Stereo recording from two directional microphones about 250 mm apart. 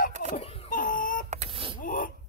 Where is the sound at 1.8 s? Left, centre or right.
Left.